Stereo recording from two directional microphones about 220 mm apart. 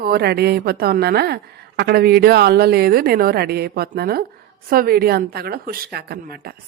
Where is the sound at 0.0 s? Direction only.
45° right (ahead or behind).